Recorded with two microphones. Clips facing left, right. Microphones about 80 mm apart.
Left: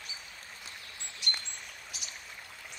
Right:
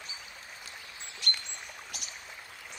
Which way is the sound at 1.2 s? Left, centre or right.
Centre.